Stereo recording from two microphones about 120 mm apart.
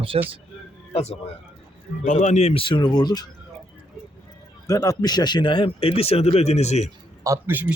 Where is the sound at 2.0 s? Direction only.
85° left; by 2.6 s 65° left (ahead or behind).